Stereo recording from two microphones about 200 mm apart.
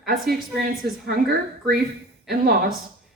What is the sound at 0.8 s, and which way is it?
Speech, 55° right (ahead or behind).